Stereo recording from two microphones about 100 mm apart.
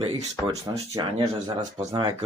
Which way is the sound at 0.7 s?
45° right (ahead or behind).